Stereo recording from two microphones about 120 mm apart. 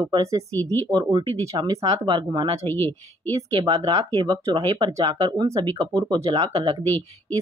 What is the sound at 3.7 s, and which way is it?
Speech, 30° right (ahead or behind).